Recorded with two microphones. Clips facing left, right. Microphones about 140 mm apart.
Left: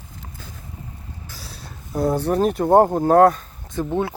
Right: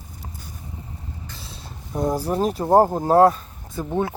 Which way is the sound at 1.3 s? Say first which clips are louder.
Even; 5° left (ahead or behind).